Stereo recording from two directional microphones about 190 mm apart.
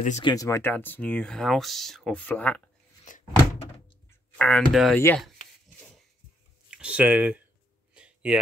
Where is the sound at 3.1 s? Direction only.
40° left (ahead or behind).